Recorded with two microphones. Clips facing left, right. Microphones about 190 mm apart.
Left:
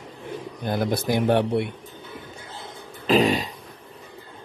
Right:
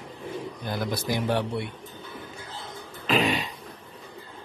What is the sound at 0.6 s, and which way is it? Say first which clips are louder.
Speech: left 7 dB; 55° left (ahead or behind).